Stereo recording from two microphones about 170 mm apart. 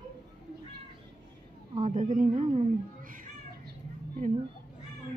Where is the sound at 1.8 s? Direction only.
50° right (ahead or behind).